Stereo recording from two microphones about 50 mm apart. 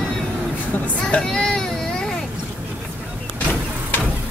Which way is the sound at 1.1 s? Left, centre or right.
Centre.